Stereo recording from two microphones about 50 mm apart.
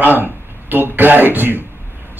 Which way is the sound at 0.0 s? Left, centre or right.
Right.